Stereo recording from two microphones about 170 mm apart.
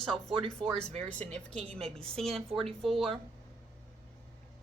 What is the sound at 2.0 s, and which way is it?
Speech, 5° left (ahead or behind).